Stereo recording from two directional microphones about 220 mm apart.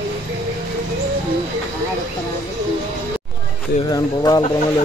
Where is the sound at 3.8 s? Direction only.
15° left (ahead or behind).